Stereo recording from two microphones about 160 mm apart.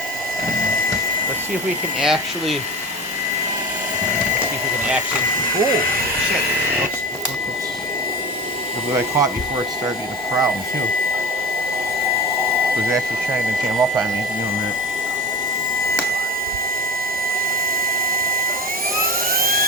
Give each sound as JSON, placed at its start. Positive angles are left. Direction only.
{"t": 2.0, "sound": "speech", "side_deg": 0}
{"t": 8.9, "sound": "speech", "side_deg": -15}
{"t": 18.1, "sound": "a sound", "side_deg": -65}
{"t": 18.9, "sound": "jet engine", "side_deg": -65}